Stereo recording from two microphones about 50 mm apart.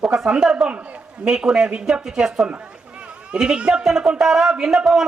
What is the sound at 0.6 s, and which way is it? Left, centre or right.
Speech, right.